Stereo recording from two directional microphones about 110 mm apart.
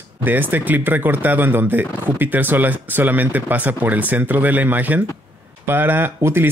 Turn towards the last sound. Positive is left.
turn(degrees=-20)  # may be behind; listen again after turning